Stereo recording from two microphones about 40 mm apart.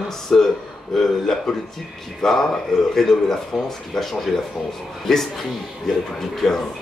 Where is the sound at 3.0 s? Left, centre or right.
Centre.